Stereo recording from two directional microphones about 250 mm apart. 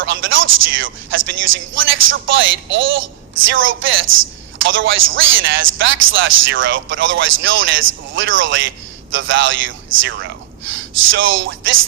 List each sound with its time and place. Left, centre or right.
0.0 s a man's voice: right
4.0 s a man's voice: right
4.6 s a man's voice: right